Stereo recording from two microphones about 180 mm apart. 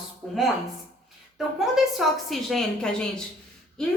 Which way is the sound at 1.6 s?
Centre (ahead or behind).